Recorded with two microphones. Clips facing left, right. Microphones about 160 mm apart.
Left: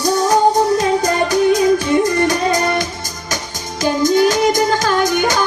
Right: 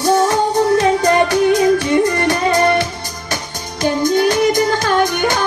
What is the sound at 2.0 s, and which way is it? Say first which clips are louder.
Music: even; 40° left (ahead or behind).